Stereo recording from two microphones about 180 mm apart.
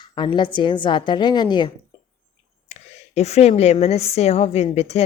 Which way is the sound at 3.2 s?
35° left (ahead or behind).